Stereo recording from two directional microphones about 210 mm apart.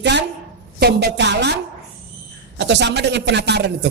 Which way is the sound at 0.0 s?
55° right (ahead or behind).